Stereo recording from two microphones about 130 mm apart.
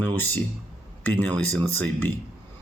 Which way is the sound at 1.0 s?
15° left (ahead or behind).